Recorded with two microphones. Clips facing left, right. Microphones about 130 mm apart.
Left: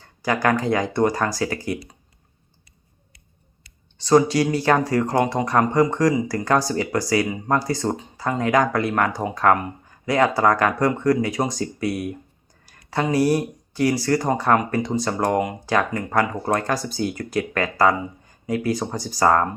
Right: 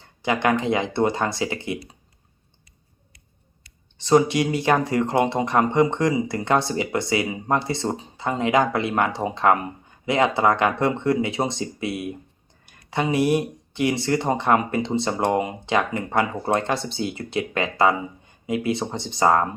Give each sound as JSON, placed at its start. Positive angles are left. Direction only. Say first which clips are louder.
{"t": 0.2, "sound": "speech", "louder": "left 1 dB", "side_deg": -20}
{"t": 4.0, "sound": "speech", "louder": "left 1 dB", "side_deg": -20}